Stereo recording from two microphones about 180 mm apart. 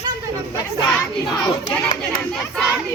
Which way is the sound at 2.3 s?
5° left (ahead or behind).